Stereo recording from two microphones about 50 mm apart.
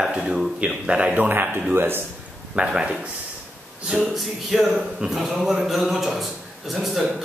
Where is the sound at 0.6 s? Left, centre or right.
Right.